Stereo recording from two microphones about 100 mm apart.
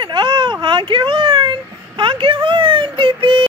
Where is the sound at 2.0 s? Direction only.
55° right (ahead or behind).